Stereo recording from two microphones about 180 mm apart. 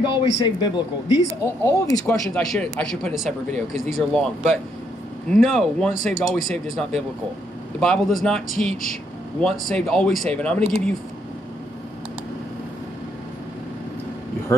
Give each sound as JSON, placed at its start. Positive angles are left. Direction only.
{"t": 0.0, "sound": "speech", "side_deg": 25}
{"t": 2.2, "sound": "speech", "side_deg": 0}
{"t": 5.3, "sound": "speech", "side_deg": 0}
{"t": 8.5, "sound": "speech", "side_deg": 50}
{"t": 9.4, "sound": "speech", "side_deg": 5}